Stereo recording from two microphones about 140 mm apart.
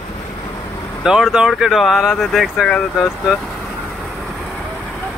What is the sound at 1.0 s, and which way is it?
Speech, 5° right (ahead or behind).